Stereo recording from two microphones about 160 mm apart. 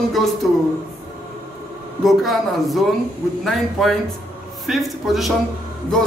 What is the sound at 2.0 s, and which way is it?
A man's voice, centre (ahead or behind).